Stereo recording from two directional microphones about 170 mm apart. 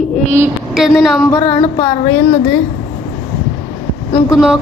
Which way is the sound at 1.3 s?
30° left (ahead or behind).